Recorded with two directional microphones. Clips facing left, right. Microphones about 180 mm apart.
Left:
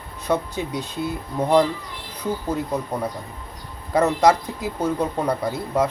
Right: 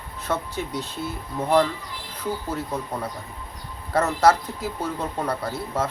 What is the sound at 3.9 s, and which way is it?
Speech, 15° left (ahead or behind).